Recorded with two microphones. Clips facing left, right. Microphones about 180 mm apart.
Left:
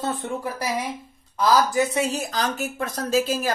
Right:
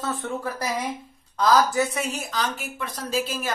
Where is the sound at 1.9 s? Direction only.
30° left (ahead or behind).